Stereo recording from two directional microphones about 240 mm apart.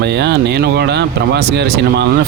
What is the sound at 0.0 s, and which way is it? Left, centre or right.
Speech, right.